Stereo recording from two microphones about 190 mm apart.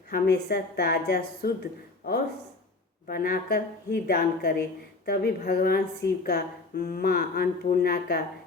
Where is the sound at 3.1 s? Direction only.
50° left (ahead or behind).